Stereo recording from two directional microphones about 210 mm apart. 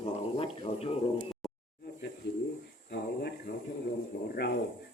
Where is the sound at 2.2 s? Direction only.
55° left (ahead or behind).